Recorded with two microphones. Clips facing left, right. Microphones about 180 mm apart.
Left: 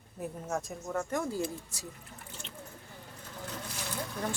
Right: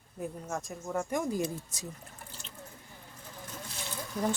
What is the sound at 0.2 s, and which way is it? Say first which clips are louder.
Speech: left 1 dB; centre (ahead or behind).